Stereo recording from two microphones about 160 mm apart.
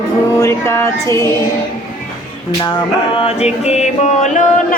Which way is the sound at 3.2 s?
40° left (ahead or behind).